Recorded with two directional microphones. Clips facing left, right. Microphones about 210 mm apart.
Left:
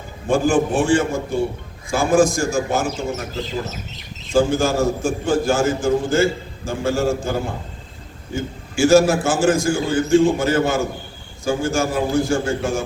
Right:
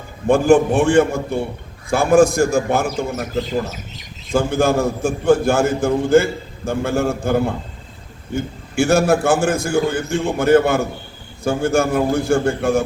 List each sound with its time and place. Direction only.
0.3 s a man's voice: 60° right (ahead or behind)
4.3 s a man's voice: 60° right (ahead or behind)